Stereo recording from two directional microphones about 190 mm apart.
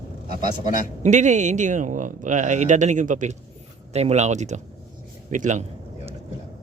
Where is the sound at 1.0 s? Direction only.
40° right (ahead or behind).